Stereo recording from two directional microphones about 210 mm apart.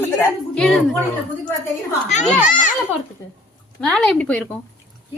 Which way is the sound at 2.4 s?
35° left (ahead or behind).